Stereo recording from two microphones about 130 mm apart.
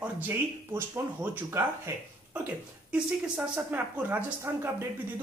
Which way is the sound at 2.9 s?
10° right (ahead or behind).